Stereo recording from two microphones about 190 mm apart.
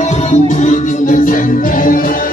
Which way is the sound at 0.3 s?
40° left (ahead or behind).